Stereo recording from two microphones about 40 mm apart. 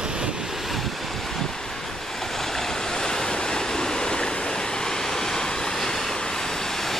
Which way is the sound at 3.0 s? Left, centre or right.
Centre.